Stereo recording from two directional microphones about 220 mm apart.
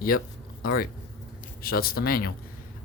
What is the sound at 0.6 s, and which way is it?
Speech, 40° left (ahead or behind).